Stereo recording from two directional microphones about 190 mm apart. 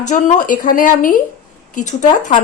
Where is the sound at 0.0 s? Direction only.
40° left (ahead or behind).